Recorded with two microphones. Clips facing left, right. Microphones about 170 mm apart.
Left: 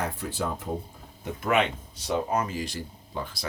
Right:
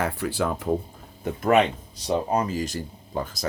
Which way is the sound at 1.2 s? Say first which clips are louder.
Right 5 dB; 40° right (ahead or behind).